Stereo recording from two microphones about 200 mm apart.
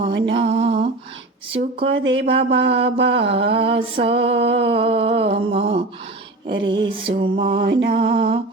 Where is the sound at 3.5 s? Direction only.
25° right (ahead or behind).